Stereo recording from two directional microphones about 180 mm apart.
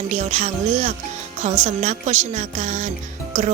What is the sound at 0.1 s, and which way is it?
Speech, 40° right (ahead or behind).